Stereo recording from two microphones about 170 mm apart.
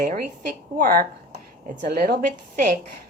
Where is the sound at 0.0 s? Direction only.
50° right (ahead or behind).